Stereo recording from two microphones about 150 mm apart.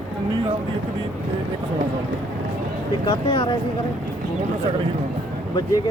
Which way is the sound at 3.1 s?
30° left (ahead or behind).